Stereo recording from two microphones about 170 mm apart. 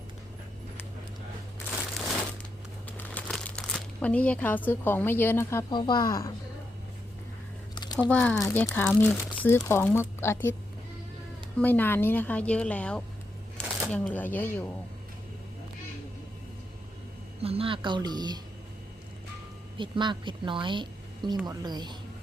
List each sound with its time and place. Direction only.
3.0 s speech: 5° left (ahead or behind)
8.1 s speech: 5° left (ahead or behind)
11.6 s speech: 10° left (ahead or behind)
13.6 s shuffling cards: 5° left (ahead or behind)
13.9 s speech: 10° left (ahead or behind)
17.4 s a woman's voice: 35° right (ahead or behind)
19.7 s a woman's voice: 30° right (ahead or behind)